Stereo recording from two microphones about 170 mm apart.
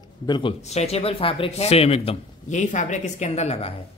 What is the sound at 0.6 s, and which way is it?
Speech, 40° left (ahead or behind).